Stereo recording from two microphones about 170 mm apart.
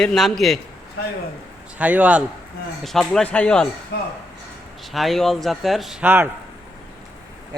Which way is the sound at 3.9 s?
70° left (ahead or behind).